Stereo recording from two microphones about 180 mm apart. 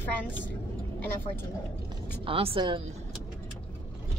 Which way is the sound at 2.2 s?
30° right (ahead or behind).